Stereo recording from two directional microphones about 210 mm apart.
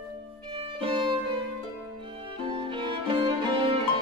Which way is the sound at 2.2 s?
25° right (ahead or behind).